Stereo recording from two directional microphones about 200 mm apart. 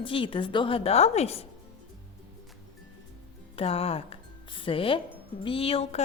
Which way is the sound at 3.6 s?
30° left (ahead or behind).